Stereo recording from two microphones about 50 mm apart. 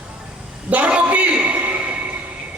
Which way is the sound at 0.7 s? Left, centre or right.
Right.